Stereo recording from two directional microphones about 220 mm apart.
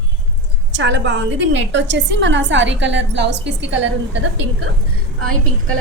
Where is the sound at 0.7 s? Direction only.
55° right (ahead or behind).